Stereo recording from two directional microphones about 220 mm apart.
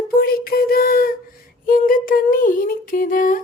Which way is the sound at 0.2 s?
45° left (ahead or behind).